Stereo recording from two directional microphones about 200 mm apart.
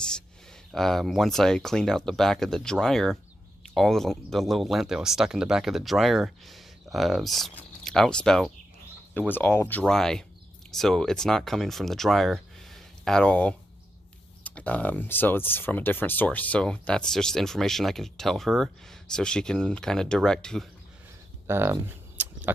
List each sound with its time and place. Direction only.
0.7 s speech: centre (ahead or behind)
21.4 s speech: 10° right (ahead or behind)
22.2 s a sound: 10° right (ahead or behind)